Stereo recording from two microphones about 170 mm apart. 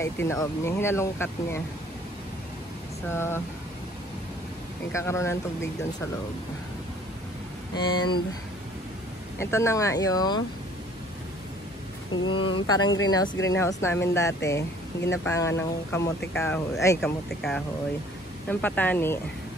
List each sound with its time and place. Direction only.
0.0 s speech: 15° left (ahead or behind)
3.1 s speech: 15° left (ahead or behind)
4.9 s speech: 15° left (ahead or behind)
7.7 s speech: 25° left (ahead or behind)
9.4 s speech: 15° left (ahead or behind)
12.3 s speech: 30° left (ahead or behind); by 17.0 s 15° left (ahead or behind)
17.0 s speech: 5° left (ahead or behind)